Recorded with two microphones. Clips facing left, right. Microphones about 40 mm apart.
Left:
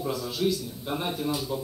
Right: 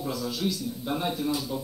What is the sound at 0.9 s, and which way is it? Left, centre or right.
Speech, centre.